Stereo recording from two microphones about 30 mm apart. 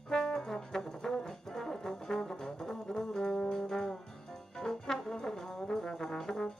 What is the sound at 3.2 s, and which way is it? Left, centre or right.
Music, left.